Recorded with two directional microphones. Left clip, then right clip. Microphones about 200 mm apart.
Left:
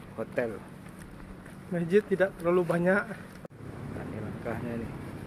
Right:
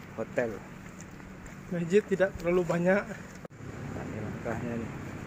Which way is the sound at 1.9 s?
15° left (ahead or behind).